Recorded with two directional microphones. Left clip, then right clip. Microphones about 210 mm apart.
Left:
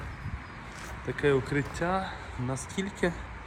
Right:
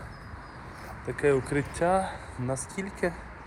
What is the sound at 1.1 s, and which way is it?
Speech, 30° left (ahead or behind).